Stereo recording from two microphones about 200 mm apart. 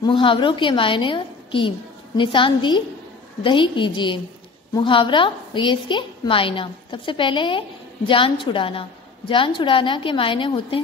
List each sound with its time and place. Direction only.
0.0 s a woman's voice: 25° left (ahead or behind)